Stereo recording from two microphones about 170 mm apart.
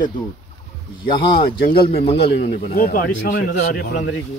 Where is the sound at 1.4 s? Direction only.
60° left (ahead or behind).